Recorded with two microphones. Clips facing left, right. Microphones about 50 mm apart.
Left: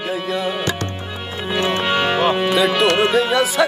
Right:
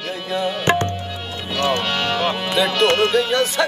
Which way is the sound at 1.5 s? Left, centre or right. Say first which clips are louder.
Left 2 dB; centre.